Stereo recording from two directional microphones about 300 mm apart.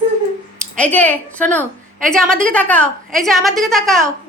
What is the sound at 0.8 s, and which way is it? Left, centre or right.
A man's voice, centre.